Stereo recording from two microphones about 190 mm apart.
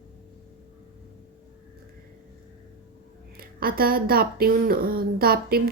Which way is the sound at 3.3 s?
50° right (ahead or behind).